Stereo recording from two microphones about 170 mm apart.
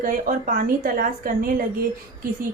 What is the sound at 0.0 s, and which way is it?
A woman's voice, 55° right (ahead or behind).